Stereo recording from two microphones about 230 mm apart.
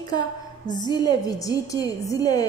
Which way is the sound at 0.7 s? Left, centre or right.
Centre.